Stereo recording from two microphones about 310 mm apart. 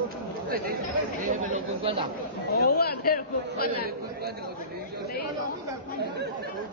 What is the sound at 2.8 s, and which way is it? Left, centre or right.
Speech, left.